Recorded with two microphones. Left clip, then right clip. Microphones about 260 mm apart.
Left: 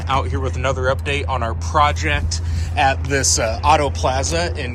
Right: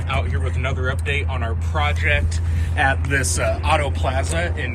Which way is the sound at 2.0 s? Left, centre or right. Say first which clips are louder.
Right 1 dB; centre.